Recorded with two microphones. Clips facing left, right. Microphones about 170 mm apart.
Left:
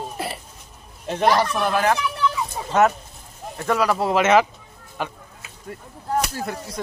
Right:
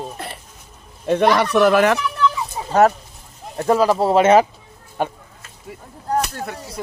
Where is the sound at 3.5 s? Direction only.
30° right (ahead or behind).